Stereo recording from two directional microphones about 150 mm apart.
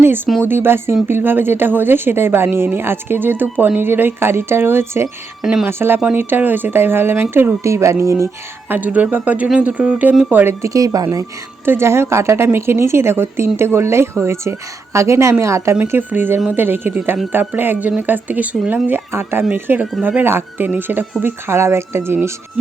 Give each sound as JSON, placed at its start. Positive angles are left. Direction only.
{"t": 0.4, "sound": "speech", "side_deg": -15}
{"t": 5.4, "sound": "speech", "side_deg": -5}
{"t": 5.6, "sound": "a woman's voice", "side_deg": -15}